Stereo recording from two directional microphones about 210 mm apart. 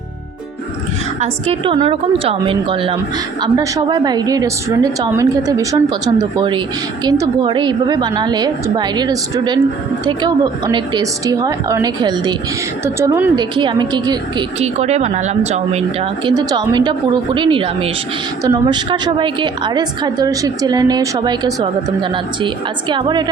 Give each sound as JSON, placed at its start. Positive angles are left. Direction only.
{"t": 1.2, "sound": "a woman's voice", "side_deg": -25}
{"t": 13.3, "sound": "a woman's voice", "side_deg": -20}
{"t": 14.6, "sound": "speech", "side_deg": -30}
{"t": 16.3, "sound": "a woman's voice", "side_deg": -20}